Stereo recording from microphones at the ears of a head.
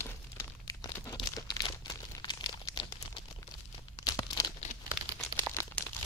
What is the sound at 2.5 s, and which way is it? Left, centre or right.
Crumpling, left.